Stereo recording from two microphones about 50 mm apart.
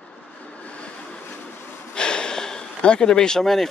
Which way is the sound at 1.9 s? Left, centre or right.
Centre.